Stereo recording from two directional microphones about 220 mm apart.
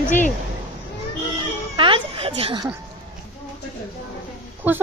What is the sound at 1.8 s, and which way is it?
Speech, 25° right (ahead or behind).